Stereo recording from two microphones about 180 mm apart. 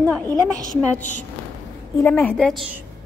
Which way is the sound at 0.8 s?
10° left (ahead or behind).